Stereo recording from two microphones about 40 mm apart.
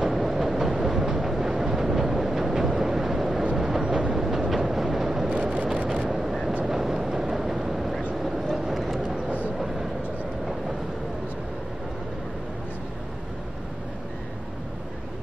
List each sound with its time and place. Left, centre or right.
0.0 s train: centre
3.5 s vehicle: centre
4.1 s train: centre
5.3 s vehicle: right
6.0 s vehicle: centre